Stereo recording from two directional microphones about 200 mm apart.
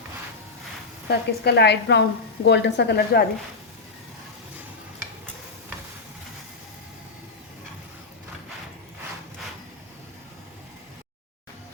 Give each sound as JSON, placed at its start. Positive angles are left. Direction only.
{"t": 1.0, "sound": "a woman's voice", "side_deg": 55}